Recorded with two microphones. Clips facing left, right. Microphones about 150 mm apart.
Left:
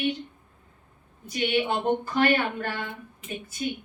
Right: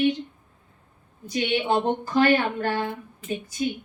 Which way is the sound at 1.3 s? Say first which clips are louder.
Right 2 dB; 35° right (ahead or behind).